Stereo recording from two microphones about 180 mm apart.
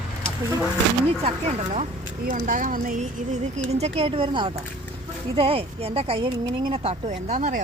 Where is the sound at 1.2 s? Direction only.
40° right (ahead or behind).